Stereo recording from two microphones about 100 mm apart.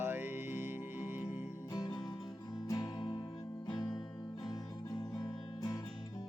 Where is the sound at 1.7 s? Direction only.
40° left (ahead or behind).